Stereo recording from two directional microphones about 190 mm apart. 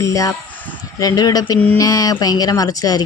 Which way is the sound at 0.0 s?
15° left (ahead or behind).